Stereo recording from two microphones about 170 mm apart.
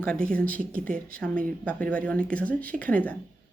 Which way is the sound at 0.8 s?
55° right (ahead or behind).